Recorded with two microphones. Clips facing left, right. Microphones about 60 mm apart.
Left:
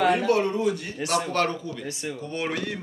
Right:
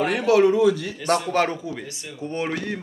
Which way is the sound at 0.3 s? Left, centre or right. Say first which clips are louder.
Right 10 dB; right.